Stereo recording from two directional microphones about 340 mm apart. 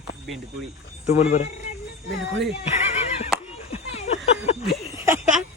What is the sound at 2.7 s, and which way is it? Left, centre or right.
Neigh, centre.